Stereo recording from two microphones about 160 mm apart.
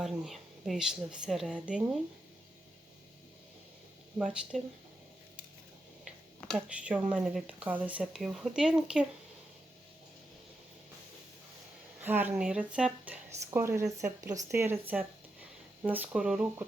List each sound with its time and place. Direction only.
0.0 s speech: centre (ahead or behind)
4.2 s speech: 5° right (ahead or behind)
6.1 s speech: 5° right (ahead or behind)
12.0 s speech: 10° right (ahead or behind)